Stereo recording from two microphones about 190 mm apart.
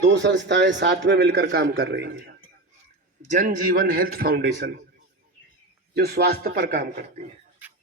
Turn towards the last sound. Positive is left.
turn(degrees=-50)  # may be behind; listen again after turning